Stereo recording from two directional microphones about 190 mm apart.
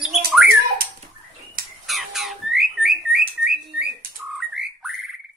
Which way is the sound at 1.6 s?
50° right (ahead or behind).